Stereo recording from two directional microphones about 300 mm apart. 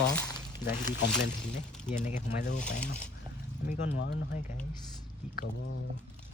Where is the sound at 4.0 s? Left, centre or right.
Left.